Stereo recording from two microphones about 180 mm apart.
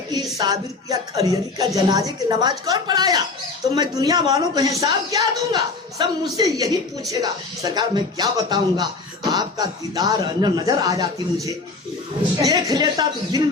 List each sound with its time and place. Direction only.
0.3 s a man's voice: 20° right (ahead or behind)
12.5 s a man's voice: 20° right (ahead or behind)